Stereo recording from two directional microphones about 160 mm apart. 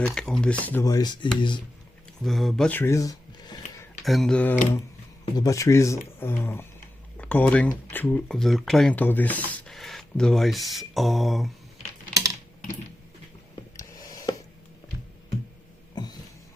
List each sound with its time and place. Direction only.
0.0 s speech: 5° left (ahead or behind)
0.9 s dishes: 25° left (ahead or behind)
2.2 s speech: centre (ahead or behind); by 3.6 s 25° left (ahead or behind)
4.0 s speech: centre (ahead or behind)
5.4 s speech: 20° left (ahead or behind); by 11.5 s centre (ahead or behind)
13.7 s a sound: 20° left (ahead or behind)
16.0 s a sound: 25° left (ahead or behind)